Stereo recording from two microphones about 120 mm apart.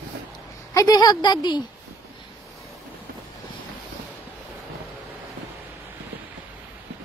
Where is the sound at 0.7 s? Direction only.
30° left (ahead or behind).